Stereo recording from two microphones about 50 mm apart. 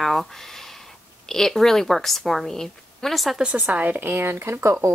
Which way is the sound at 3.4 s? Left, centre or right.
Right.